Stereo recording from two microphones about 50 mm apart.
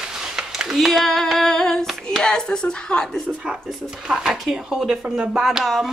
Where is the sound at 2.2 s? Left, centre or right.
Centre.